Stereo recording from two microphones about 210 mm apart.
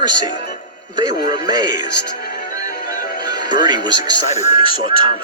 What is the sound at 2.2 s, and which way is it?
Music, 45° left (ahead or behind).